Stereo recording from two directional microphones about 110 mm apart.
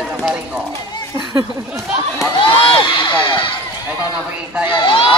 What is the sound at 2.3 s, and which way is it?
Speech, 50° left (ahead or behind).